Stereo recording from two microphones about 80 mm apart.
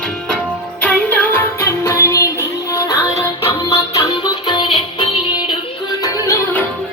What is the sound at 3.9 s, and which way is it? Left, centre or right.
Music, left.